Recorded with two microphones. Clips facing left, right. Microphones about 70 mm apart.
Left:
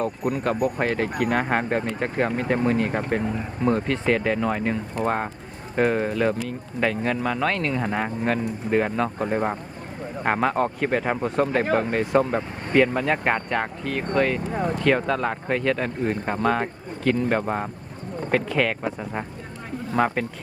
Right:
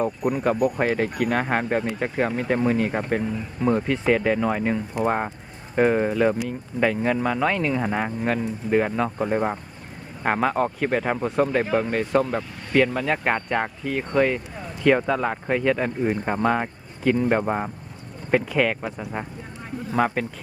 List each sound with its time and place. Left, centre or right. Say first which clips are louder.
0.2 s speech: right 2 dB; centre
14.5 s speech: left 11 dB; left
14.8 s speech: right 4 dB; centre